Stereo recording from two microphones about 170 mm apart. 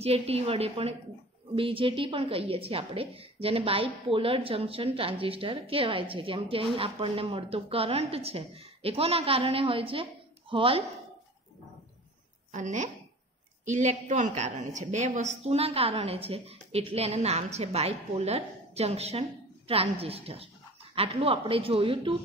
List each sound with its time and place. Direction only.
0.0 s a woman's voice: 35° right (ahead or behind)
12.5 s a woman's voice: 45° right (ahead or behind)